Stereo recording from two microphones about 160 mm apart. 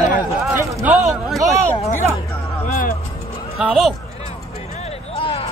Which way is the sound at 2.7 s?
65° left (ahead or behind).